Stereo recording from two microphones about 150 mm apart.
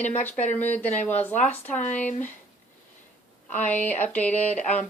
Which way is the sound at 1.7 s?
55° left (ahead or behind).